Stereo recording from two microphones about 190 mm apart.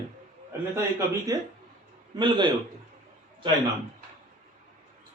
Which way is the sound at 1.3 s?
20° right (ahead or behind).